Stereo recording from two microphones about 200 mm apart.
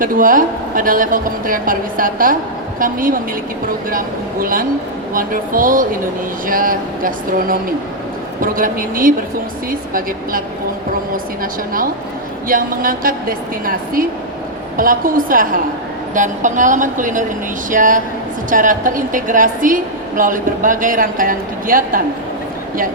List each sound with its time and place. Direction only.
0.0 s speech: 45° right (ahead or behind)
12.5 s a woman's voice: 45° right (ahead or behind)